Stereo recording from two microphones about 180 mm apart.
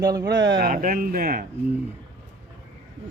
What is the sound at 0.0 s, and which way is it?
Speech, 20° right (ahead or behind).